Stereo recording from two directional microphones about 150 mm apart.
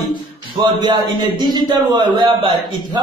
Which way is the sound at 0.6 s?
30° right (ahead or behind).